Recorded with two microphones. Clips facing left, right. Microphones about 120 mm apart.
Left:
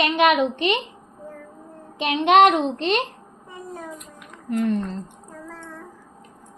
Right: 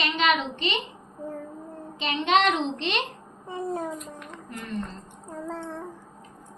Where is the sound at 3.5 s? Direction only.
30° right (ahead or behind).